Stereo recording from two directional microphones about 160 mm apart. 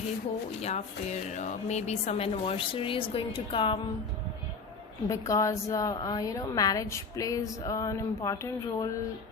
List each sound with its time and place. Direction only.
0.6 s speech: 45° left (ahead or behind)
5.0 s a woman's voice: 20° left (ahead or behind)